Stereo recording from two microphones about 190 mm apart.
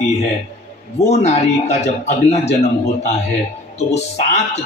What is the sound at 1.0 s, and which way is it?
Speech, 35° left (ahead or behind).